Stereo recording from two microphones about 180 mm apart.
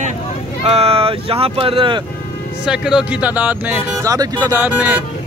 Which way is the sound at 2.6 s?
5° right (ahead or behind).